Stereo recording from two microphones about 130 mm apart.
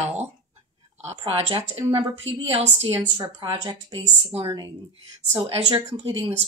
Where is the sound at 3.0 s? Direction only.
35° right (ahead or behind).